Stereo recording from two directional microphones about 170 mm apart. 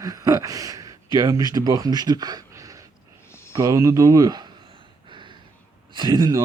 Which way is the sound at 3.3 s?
15° left (ahead or behind).